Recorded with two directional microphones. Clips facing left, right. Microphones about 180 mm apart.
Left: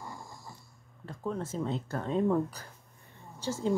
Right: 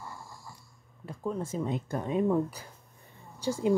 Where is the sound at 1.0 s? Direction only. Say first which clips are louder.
Right 1 dB; 10° right (ahead or behind).